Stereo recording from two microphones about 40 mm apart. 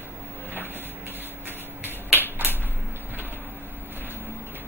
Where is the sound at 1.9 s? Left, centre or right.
Right.